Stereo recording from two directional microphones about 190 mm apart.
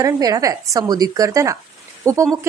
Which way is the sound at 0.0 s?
20° right (ahead or behind).